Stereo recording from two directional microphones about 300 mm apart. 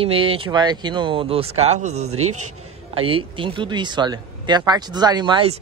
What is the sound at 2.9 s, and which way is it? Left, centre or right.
Speech, centre.